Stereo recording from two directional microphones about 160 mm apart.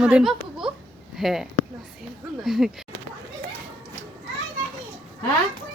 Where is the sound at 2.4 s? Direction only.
Centre (ahead or behind).